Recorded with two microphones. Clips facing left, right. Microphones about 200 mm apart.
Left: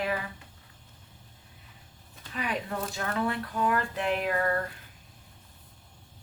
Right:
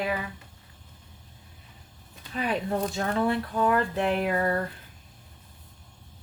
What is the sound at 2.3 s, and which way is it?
Speech, 35° right (ahead or behind).